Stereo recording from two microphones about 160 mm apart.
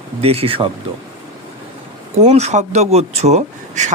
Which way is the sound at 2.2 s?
45° right (ahead or behind).